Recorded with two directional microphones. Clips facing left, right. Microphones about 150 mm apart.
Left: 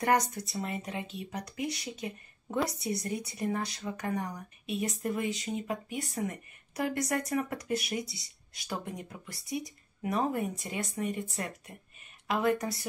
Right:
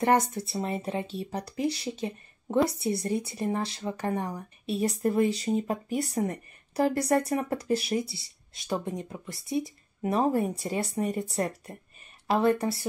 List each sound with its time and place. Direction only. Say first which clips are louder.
0.0 s speech: right 4 dB; 25° right (ahead or behind)